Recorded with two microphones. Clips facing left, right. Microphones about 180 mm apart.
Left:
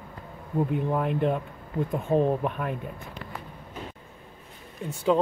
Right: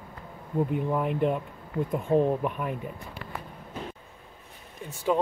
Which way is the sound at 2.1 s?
20° left (ahead or behind).